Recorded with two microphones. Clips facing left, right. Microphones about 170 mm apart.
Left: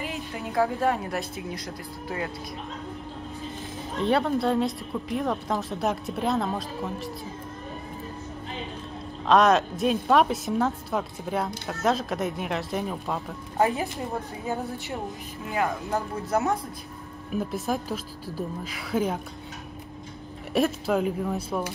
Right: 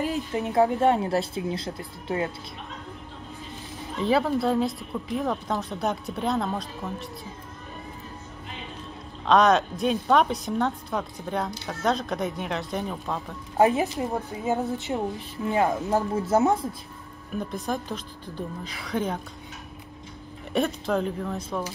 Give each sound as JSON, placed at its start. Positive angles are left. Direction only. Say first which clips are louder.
{"t": 0.4, "sound": "a woman's voice", "louder": "right 3 dB", "side_deg": -25}
{"t": 4.0, "sound": "a woman's voice", "louder": "right 1 dB", "side_deg": 0}
{"t": 9.2, "sound": "a woman's voice", "louder": "even", "side_deg": 0}
{"t": 13.6, "sound": "a woman's voice", "louder": "right 4 dB", "side_deg": -20}
{"t": 17.4, "sound": "a woman's voice", "louder": "left 1 dB", "side_deg": 5}
{"t": 20.5, "sound": "speech", "louder": "left 1 dB", "side_deg": 5}